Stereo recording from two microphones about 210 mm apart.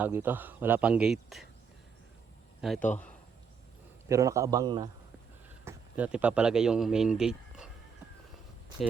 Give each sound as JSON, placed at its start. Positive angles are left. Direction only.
{"t": 0.0, "sound": "speech", "side_deg": -10}
{"t": 2.6, "sound": "a man's voice", "side_deg": 0}
{"t": 4.1, "sound": "speech", "side_deg": -15}
{"t": 5.6, "sound": "speech", "side_deg": -5}